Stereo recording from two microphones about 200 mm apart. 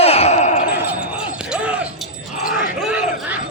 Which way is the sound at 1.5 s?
5° right (ahead or behind).